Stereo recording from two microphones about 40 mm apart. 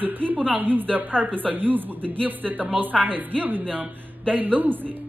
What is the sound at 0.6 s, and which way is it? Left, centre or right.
A man's voice, right.